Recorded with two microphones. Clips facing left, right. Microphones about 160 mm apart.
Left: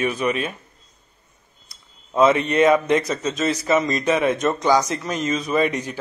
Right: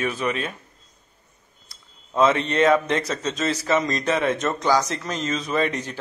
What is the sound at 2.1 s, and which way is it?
Speech, 10° left (ahead or behind).